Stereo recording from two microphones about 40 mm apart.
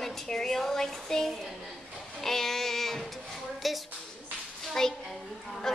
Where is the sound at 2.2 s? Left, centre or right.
Centre.